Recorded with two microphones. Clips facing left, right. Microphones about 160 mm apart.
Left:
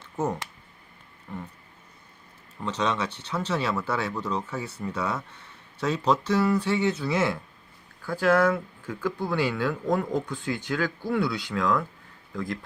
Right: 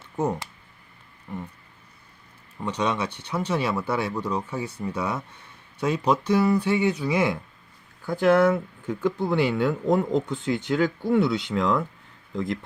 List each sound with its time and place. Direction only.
1.3 s speech: 15° right (ahead or behind)
2.6 s speech: 10° right (ahead or behind)